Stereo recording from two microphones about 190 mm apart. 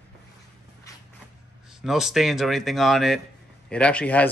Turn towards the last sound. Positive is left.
turn(degrees=5)  # may be behind; listen again after turning